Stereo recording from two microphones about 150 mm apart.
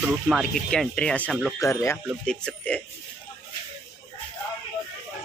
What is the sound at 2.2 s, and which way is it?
Speech, 5° left (ahead or behind).